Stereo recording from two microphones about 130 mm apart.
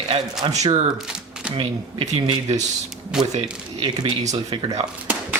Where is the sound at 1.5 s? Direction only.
45° right (ahead or behind).